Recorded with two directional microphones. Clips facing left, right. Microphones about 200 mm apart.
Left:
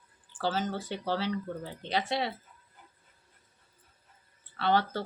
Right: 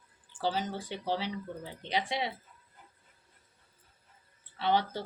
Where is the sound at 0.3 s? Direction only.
15° right (ahead or behind).